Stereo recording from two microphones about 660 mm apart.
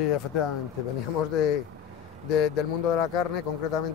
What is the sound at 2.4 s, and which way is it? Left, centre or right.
Speech, left.